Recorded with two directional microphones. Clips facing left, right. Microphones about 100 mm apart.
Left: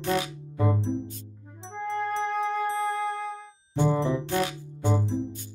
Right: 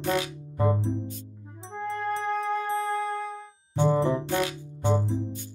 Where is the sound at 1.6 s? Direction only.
5° right (ahead or behind).